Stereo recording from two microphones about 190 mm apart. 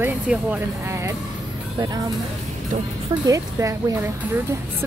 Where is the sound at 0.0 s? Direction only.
10° right (ahead or behind).